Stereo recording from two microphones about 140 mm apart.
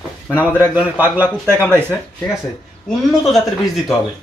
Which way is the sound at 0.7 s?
15° right (ahead or behind).